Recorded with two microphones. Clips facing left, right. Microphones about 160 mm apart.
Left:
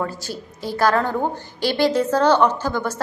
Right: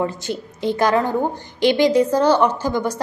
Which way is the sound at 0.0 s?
20° right (ahead or behind).